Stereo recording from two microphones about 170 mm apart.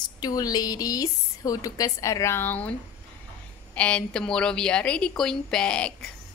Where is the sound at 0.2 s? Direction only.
20° left (ahead or behind).